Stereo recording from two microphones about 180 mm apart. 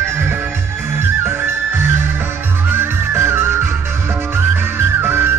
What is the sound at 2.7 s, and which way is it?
Music, 15° right (ahead or behind).